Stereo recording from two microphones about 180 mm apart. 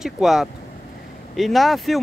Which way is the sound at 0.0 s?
Centre (ahead or behind).